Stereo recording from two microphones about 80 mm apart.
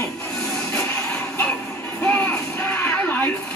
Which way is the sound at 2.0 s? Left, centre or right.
Centre.